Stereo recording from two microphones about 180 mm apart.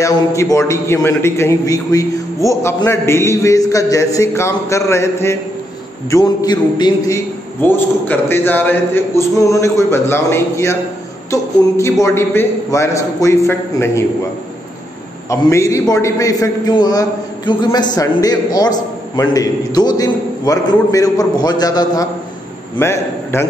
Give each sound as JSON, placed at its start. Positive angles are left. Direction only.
{"t": 0.0, "sound": "a man's voice", "side_deg": 15}
{"t": 7.6, "sound": "a man's voice", "side_deg": 10}
{"t": 15.2, "sound": "a man's voice", "side_deg": 15}